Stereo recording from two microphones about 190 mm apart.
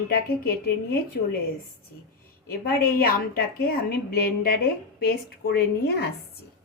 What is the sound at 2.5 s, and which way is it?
A woman's voice, 50° left (ahead or behind).